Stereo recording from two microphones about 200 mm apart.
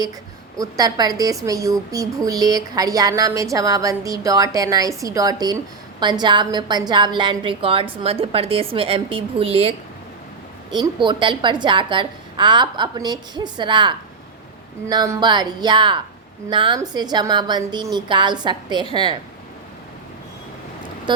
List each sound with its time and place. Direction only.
0.6 s a woman's voice: 20° right (ahead or behind)